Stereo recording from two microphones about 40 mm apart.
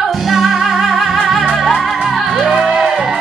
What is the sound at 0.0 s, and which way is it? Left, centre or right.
Music, centre.